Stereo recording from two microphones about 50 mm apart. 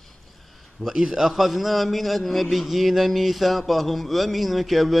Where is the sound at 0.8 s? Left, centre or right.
Centre.